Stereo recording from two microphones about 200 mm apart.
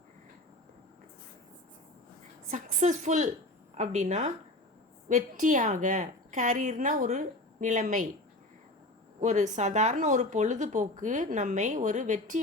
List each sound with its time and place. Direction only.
2.5 s speech: 35° right (ahead or behind)
9.2 s speech: 35° right (ahead or behind)